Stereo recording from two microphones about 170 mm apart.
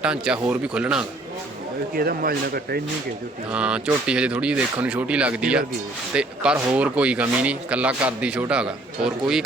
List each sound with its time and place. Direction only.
0.0 s speech: 5° right (ahead or behind)
2.0 s speech: 60° right (ahead or behind)
3.5 s speech: 5° right (ahead or behind)